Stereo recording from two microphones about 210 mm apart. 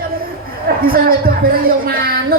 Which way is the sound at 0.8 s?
45° right (ahead or behind).